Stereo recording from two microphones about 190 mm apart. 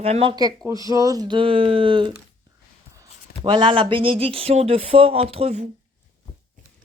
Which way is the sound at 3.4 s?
25° right (ahead or behind).